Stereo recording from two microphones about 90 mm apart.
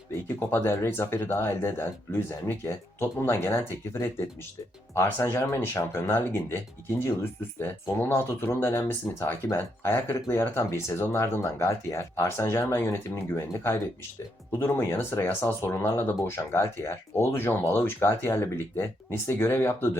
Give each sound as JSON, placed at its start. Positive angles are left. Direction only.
{"t": 0.1, "sound": "speech", "side_deg": 25}
{"t": 4.9, "sound": "speech", "side_deg": 30}